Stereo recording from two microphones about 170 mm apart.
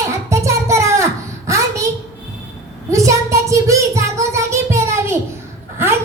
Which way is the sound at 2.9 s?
20° right (ahead or behind).